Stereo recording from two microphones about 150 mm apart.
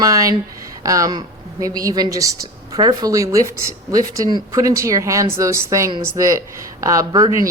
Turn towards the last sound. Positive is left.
turn(degrees=-25)  # may be behind; listen again after turning